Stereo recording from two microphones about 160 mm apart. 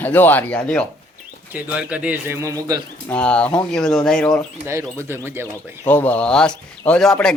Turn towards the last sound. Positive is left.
turn(degrees=5)  # may be behind; listen again after turning